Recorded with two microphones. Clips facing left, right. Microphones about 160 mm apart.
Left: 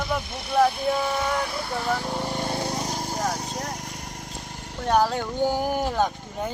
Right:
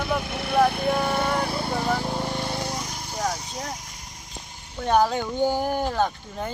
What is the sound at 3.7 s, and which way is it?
Vehicle, 60° left (ahead or behind).